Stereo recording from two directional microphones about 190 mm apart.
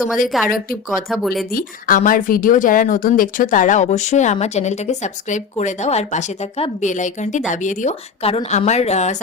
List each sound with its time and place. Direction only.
0.3 s speech: centre (ahead or behind)
1.5 s speech: 45° left (ahead or behind)